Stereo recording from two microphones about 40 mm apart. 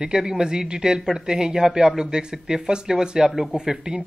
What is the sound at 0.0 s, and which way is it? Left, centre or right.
Speech, centre.